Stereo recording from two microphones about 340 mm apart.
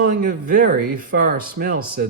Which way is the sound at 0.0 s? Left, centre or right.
Right.